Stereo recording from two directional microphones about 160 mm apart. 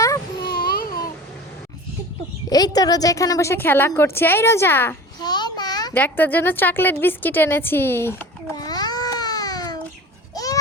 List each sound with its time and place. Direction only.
0.5 s a sound: 70° left (ahead or behind)
2.5 s a woman's voice: 25° left (ahead or behind)
5.2 s a sound: 25° left (ahead or behind)
5.9 s a woman's voice: 10° left (ahead or behind)
8.5 s babbling: 25° left (ahead or behind)
10.3 s goat: 20° left (ahead or behind)